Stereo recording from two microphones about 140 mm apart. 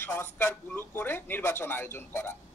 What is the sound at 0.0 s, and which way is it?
Speech, 15° left (ahead or behind).